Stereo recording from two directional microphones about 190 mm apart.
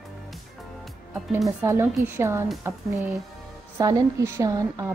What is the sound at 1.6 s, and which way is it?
A woman's voice, 15° right (ahead or behind).